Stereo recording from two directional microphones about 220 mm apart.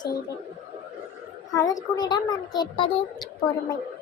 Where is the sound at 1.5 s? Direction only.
15° left (ahead or behind).